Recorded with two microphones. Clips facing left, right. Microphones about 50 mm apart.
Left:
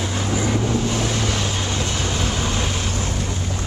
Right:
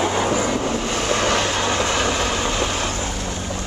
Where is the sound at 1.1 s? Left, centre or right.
Right.